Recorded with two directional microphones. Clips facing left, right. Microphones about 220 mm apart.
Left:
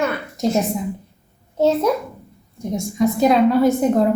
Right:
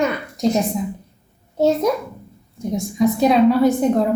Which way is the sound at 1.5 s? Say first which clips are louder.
Even; 10° right (ahead or behind).